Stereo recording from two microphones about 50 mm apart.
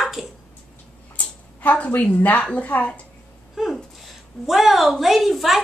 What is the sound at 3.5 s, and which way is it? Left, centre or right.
A woman's voice, centre.